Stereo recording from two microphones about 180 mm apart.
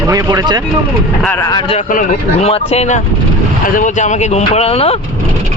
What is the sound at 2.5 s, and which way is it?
Speech, 35° left (ahead or behind).